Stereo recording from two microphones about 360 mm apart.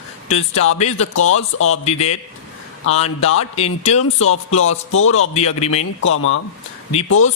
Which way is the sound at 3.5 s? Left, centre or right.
Centre.